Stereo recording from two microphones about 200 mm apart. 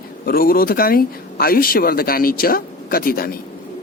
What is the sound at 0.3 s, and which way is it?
Speech, 50° left (ahead or behind).